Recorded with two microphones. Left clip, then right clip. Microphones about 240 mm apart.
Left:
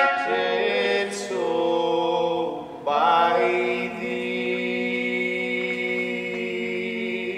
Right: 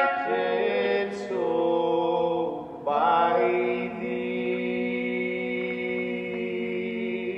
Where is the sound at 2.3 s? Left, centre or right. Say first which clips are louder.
Left 2 dB; right.